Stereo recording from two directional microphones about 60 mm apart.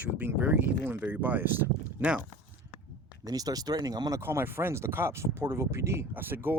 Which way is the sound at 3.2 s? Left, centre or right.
Right.